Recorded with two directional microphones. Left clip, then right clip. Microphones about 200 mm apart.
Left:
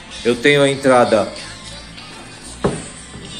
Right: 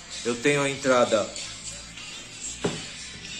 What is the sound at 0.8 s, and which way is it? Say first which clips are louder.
Speech: left 9 dB; 10° right (ahead or behind).